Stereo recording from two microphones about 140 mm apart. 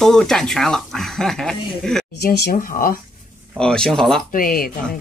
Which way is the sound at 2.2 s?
90° left.